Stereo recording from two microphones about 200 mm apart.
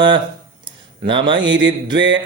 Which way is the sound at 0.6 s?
25° right (ahead or behind).